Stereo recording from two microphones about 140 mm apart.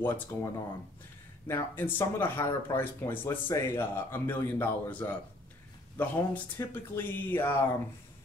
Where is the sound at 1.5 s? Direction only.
15° left (ahead or behind).